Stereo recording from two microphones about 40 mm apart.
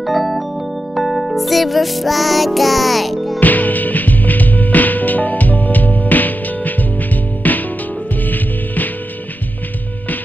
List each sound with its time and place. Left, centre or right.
0.0 s keyboard: centre
0.9 s music: centre
3.3 s music: left